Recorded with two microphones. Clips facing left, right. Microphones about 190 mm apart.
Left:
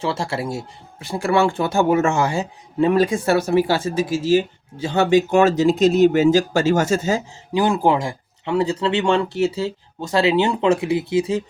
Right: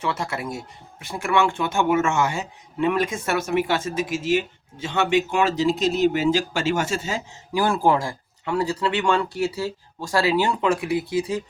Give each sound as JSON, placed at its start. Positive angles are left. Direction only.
{"t": 0.0, "sound": "speech", "side_deg": 30}
{"t": 7.5, "sound": "speech", "side_deg": 20}